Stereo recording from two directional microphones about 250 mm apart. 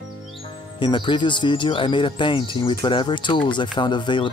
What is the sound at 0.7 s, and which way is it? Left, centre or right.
Speech, centre.